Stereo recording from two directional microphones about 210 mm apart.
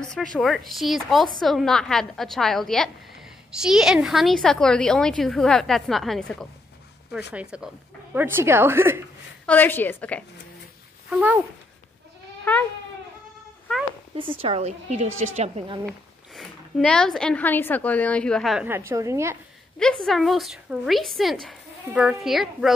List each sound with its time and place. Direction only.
0.1 s a woman's voice: 5° left (ahead or behind)
9.5 s a woman's voice: 10° left (ahead or behind)
11.1 s a woman's voice: 5° right (ahead or behind)
14.1 s a woman's voice: 25° right (ahead or behind)
16.3 s a woman's voice: 5° left (ahead or behind); by 19.3 s 15° right (ahead or behind)
19.8 s a woman's voice: 5° left (ahead or behind)